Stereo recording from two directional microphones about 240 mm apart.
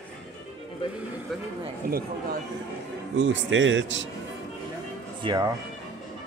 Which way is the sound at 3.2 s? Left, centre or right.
Right.